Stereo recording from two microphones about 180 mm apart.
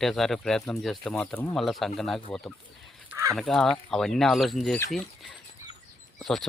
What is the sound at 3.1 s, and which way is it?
Fowl, 15° right (ahead or behind).